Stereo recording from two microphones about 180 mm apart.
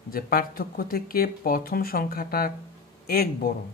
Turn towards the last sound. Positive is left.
turn(degrees=55)  # may be behind; listen again after turning